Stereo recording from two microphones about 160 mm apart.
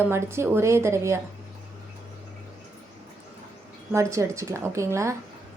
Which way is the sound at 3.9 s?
20° right (ahead or behind).